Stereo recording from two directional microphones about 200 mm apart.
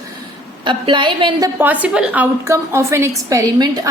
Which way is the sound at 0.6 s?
25° right (ahead or behind).